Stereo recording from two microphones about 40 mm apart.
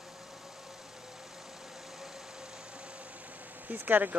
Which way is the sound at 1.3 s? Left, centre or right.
Centre.